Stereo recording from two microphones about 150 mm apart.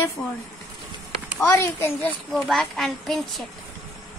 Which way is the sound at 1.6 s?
15° left (ahead or behind).